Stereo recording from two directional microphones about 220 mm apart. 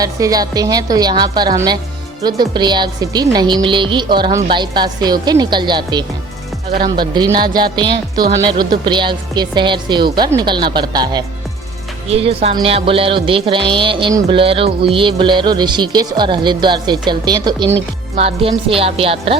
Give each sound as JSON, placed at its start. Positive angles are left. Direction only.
{"t": 0.0, "sound": "a woman's voice", "side_deg": -15}